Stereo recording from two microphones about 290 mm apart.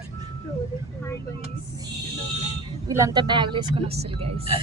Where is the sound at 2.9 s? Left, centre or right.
Centre.